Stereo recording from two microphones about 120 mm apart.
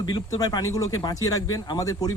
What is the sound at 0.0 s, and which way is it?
Speech, 35° left (ahead or behind).